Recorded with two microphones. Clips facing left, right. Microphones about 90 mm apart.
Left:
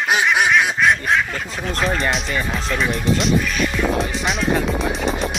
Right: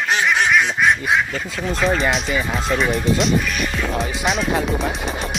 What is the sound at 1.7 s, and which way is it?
Speech, centre (ahead or behind).